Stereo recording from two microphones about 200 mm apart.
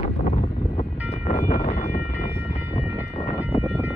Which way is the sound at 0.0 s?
30° left (ahead or behind).